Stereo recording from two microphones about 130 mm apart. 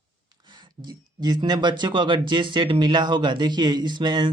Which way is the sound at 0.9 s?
35° right (ahead or behind).